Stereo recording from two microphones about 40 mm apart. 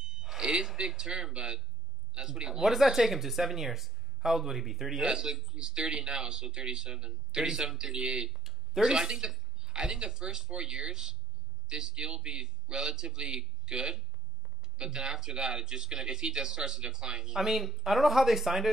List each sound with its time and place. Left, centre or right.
0.0 s a sound: right
0.4 s speech: centre
2.6 s speech: centre
5.0 s speech: centre
8.3 s a sound: centre
8.8 s speech: centre
17.4 s speech: centre